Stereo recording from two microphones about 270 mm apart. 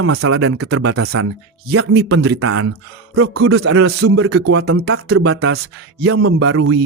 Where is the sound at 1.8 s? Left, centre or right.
Right.